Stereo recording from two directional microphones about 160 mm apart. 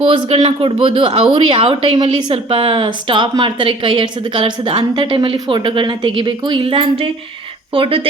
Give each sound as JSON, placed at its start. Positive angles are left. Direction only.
{"t": 0.0, "sound": "speech", "side_deg": -40}